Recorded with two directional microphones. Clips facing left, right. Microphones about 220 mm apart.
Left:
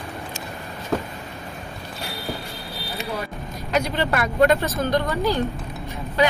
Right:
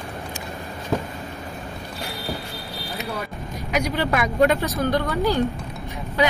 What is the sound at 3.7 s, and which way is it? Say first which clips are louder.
Vehicle: left 1 dB; 10° right (ahead or behind).